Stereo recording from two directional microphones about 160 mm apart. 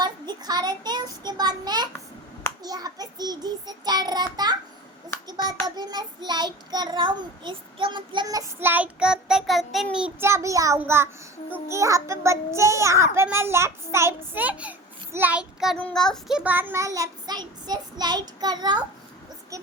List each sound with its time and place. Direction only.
0.0 s child singing: 25° right (ahead or behind)
5.6 s child singing: 25° right (ahead or behind)
10.8 s a child's voice: 15° right (ahead or behind)
11.7 s child singing: 20° right (ahead or behind)
13.1 s a child's voice: 15° right (ahead or behind)
15.8 s child singing: 5° left (ahead or behind); by 18.8 s 25° right (ahead or behind)